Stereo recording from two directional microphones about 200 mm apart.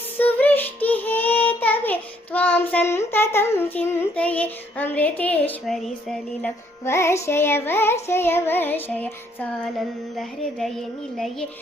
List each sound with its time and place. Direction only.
0.2 s child singing: 10° left (ahead or behind)
6.8 s music: 15° left (ahead or behind)